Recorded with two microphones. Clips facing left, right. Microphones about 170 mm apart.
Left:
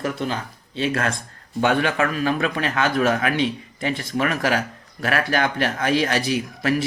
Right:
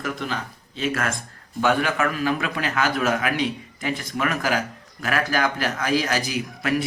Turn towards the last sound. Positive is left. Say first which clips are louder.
# left 4 dB
turn(degrees=30)  # may be behind; listen again after turning